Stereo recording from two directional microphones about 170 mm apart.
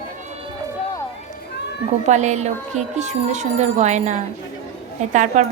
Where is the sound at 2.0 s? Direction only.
45° right (ahead or behind).